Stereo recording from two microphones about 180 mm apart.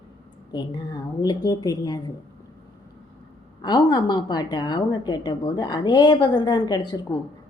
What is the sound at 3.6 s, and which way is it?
A woman's voice, 20° left (ahead or behind).